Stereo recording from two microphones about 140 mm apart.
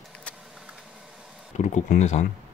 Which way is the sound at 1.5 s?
60° left (ahead or behind).